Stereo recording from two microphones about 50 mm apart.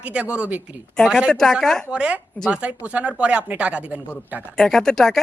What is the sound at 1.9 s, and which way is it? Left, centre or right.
A man's voice, right.